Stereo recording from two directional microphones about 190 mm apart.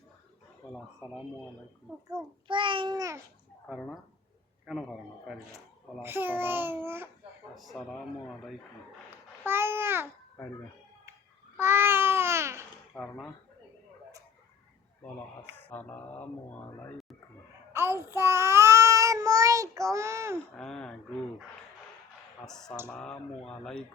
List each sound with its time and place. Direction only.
2.5 s a child's voice: 25° right (ahead or behind)
3.7 s speech: 5° left (ahead or behind)
6.0 s a child's voice: 10° right (ahead or behind)
7.5 s speech: centre (ahead or behind)
9.0 s babbling: 10° right (ahead or behind)
11.5 s babbling: 10° right (ahead or behind)
12.9 s speech: 5° left (ahead or behind)
15.7 s mantra: 10° left (ahead or behind)
17.7 s child singing: 15° right (ahead or behind)
20.6 s speech: 5° left (ahead or behind)
22.4 s speech: 5° left (ahead or behind)